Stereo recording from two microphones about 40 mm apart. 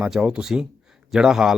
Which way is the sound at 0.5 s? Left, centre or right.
Right.